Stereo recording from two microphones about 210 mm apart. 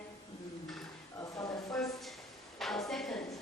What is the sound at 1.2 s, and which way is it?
Speech, 15° left (ahead or behind).